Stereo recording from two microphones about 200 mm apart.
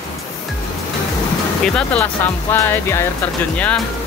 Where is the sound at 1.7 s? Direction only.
5° left (ahead or behind).